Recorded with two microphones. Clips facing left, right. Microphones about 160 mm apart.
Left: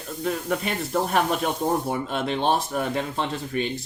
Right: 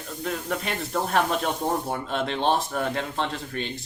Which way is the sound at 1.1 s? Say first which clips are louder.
Right 2 dB; 5° left (ahead or behind).